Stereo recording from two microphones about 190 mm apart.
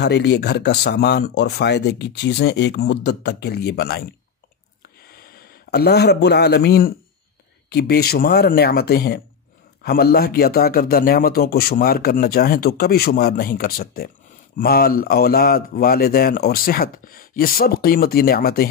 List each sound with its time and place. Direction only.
0.0 s a man's voice: 60° left (ahead or behind)